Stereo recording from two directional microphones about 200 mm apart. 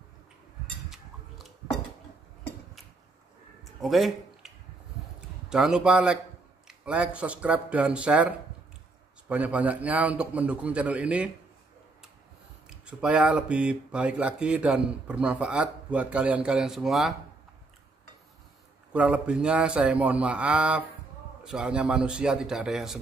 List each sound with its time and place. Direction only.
0.8 s a sound: centre (ahead or behind)
3.8 s speech: centre (ahead or behind)
5.5 s a man's voice: 5° right (ahead or behind)
12.6 s speech: 5° right (ahead or behind)
18.9 s speech: 5° right (ahead or behind)